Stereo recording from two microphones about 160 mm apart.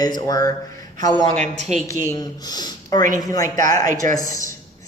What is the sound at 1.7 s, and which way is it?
Speech, 45° right (ahead or behind).